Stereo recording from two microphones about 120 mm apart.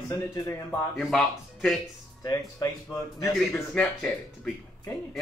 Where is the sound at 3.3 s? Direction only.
5° left (ahead or behind).